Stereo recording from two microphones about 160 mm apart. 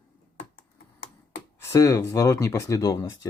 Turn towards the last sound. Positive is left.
turn(degrees=20)  # may be behind; listen again after turning